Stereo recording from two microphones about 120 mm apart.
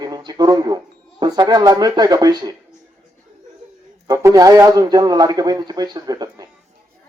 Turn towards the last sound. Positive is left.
turn(degrees=-30)  # may be behind; listen again after turning